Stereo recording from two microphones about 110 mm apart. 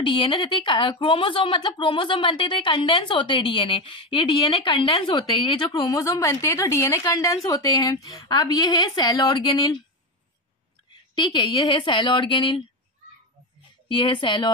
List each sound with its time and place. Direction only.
0.0 s speech: 50° left (ahead or behind)
5.8 s a woman's voice: 30° left (ahead or behind)
11.1 s speech: 45° left (ahead or behind)
13.8 s speech: 50° left (ahead or behind)